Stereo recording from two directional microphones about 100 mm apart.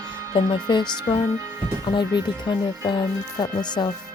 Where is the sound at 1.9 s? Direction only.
50° left (ahead or behind).